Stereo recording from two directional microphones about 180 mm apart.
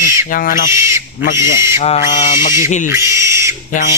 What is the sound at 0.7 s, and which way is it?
Bird, 15° right (ahead or behind).